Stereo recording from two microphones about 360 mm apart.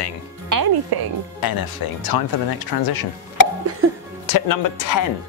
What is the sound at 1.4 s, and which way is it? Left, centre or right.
Speech, left.